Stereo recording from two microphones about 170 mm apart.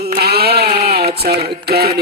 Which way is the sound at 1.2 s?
65° right (ahead or behind).